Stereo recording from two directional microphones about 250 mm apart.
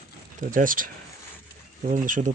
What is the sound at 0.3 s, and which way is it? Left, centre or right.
Speech, right.